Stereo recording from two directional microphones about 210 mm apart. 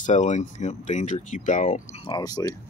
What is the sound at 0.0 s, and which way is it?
Speech, 35° left (ahead or behind).